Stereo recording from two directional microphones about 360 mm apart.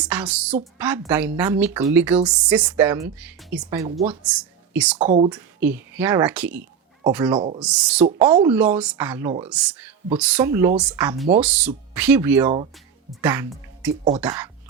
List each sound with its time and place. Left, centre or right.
0.0 s speech: centre
4.9 s speech: centre
5.3 s speech: centre
7.3 s speech: centre